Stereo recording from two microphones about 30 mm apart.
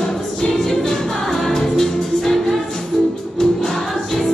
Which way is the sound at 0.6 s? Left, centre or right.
Centre.